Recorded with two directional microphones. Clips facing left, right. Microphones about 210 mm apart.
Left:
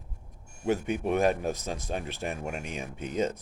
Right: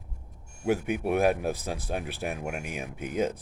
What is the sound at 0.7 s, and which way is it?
Speech, 10° right (ahead or behind).